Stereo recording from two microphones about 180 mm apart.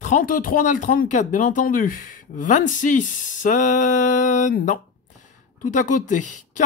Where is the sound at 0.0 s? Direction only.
45° left (ahead or behind).